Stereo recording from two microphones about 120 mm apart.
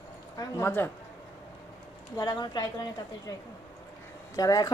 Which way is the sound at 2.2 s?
35° left (ahead or behind).